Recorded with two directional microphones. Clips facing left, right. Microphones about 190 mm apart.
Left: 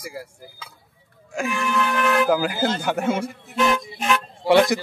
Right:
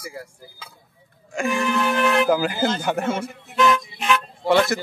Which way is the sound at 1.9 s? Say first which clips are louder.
Right 1 dB; 25° right (ahead or behind).